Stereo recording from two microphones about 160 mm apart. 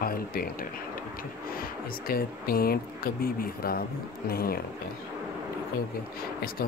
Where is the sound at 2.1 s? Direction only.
70° left (ahead or behind).